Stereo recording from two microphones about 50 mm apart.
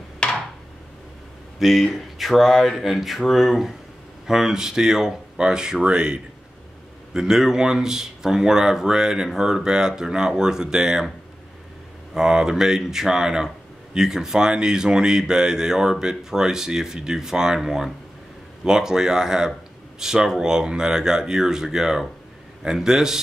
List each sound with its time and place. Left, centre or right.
0.2 s a sound: centre
1.6 s speech: centre; by 6.2 s right
7.2 s speech: centre
12.1 s speech: centre